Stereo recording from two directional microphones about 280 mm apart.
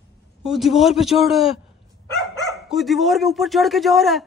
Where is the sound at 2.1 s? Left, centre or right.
Centre.